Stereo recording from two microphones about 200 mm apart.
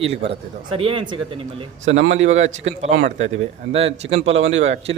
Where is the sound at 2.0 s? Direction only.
70° right (ahead or behind).